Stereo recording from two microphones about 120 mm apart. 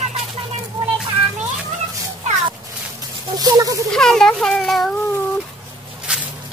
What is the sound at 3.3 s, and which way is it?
Speech, 30° right (ahead or behind).